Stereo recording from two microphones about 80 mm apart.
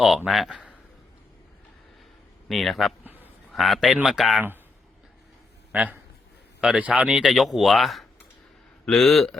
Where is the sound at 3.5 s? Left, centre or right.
Centre.